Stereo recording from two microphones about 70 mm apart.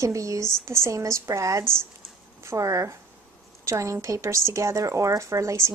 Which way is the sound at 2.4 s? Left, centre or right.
Right.